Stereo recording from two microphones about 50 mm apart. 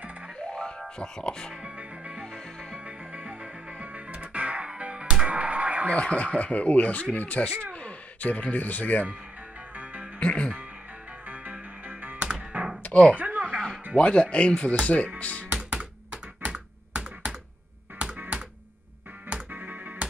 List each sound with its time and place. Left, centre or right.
0.4 s music: left
1.6 s music: right
5.9 s speech: left
10.1 s music: left
11.2 s music: right
12.2 s music: right
12.8 s speech: left
13.2 s chuckle: right
13.9 s speech: left
15.1 s music: left
15.5 s computer keyboard: right
17.9 s music: right
19.5 s music: right